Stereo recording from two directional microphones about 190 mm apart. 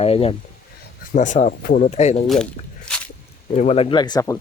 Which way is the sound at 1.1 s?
40° left (ahead or behind).